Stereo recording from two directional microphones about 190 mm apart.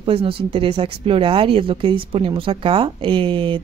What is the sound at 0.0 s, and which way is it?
A woman's voice, 30° right (ahead or behind).